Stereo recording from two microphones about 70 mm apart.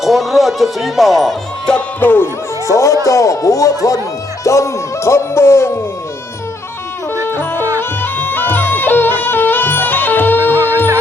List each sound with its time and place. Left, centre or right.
0.0 s speech: centre
2.0 s speech: left
2.6 s speech: left
7.3 s music: left
10.5 s music: right